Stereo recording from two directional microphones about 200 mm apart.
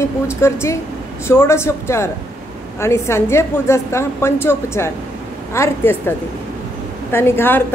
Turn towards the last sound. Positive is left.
turn(degrees=10)  # may be behind; listen again after turning